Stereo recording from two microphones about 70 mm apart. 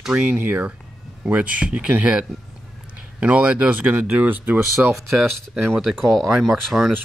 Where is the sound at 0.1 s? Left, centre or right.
Centre.